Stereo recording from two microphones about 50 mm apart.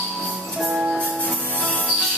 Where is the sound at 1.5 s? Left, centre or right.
Left.